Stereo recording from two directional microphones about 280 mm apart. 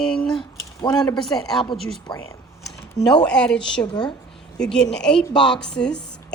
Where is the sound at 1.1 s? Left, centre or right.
Centre.